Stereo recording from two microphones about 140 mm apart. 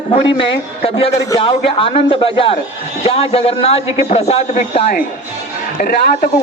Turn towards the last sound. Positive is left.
turn(degrees=90)